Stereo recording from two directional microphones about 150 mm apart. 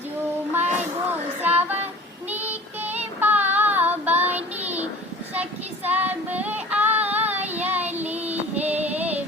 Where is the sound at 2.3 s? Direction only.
10° right (ahead or behind).